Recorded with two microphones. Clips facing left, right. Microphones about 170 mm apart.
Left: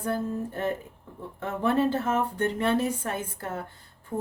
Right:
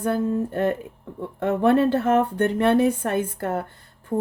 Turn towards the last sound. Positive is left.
turn(degrees=-35)  # may be behind; listen again after turning